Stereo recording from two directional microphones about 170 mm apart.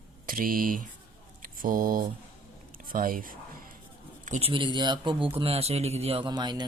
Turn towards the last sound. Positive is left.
turn(degrees=-25)  # may be behind; listen again after turning